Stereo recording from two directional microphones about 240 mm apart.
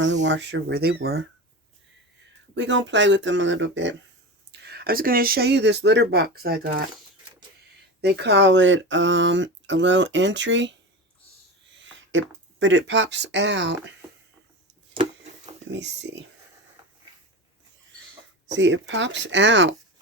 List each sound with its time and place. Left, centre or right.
0.0 s speech: right
2.6 s speech: right
8.0 s speech: right
11.8 s speech: right
15.7 s speech: right
18.5 s speech: right